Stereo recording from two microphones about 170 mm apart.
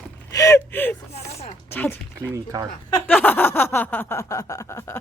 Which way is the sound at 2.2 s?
20° right (ahead or behind).